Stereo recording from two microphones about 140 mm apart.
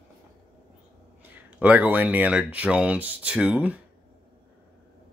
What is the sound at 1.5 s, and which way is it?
Speech, 10° right (ahead or behind).